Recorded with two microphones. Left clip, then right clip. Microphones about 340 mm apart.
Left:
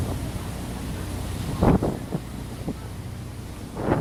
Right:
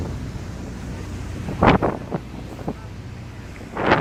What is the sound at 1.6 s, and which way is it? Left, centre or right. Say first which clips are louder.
Wind noise: right 6 dB; right.